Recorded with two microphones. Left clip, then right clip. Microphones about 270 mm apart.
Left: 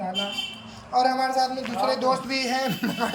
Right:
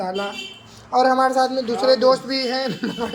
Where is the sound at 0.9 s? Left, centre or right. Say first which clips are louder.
Right 5 dB; centre.